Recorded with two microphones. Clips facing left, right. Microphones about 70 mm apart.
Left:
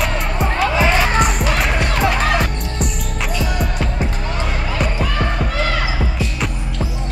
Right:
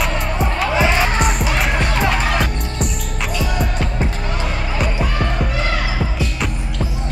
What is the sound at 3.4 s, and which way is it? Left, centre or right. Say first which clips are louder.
Music: right 1 dB; centre.